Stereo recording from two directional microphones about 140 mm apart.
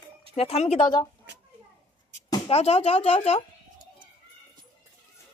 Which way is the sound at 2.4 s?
45° left (ahead or behind).